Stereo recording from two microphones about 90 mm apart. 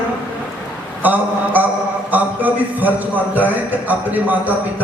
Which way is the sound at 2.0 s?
20° right (ahead or behind).